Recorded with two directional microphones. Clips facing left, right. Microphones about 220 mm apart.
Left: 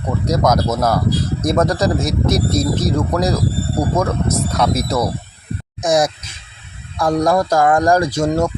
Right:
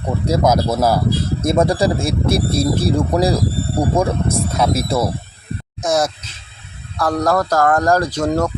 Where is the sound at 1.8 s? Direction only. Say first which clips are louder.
Even; 30° right (ahead or behind).